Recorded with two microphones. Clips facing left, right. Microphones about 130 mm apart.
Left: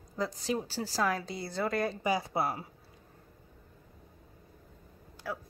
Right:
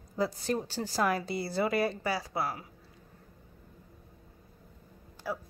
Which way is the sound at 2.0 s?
20° left (ahead or behind).